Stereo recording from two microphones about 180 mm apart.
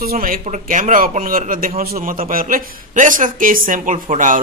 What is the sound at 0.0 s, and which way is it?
Speech, 55° right (ahead or behind).